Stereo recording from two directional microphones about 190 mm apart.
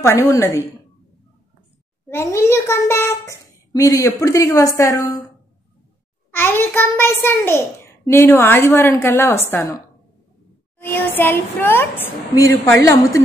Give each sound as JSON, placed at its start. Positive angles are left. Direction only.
{"t": 0.0, "sound": "a child's voice", "side_deg": 15}
{"t": 2.0, "sound": "a child's voice", "side_deg": 15}
{"t": 6.3, "sound": "a child's voice", "side_deg": 10}